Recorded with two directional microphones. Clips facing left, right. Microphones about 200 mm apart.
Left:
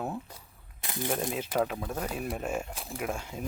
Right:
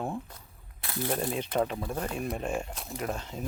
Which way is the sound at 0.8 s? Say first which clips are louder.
Right 1 dB; 15° left (ahead or behind).